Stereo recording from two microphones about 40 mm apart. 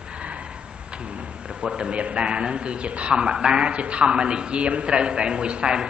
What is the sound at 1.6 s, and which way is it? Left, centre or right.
A man's voice, right.